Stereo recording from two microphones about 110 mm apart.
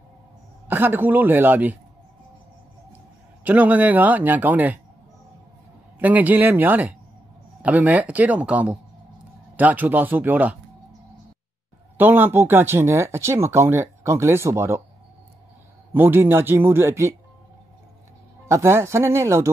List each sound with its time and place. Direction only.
0.7 s speech: 20° right (ahead or behind)
3.4 s speech: 15° right (ahead or behind)
5.9 s speech: 15° right (ahead or behind)
12.0 s speech: 20° right (ahead or behind)
15.9 s speech: 20° right (ahead or behind)
18.5 s speech: 25° right (ahead or behind)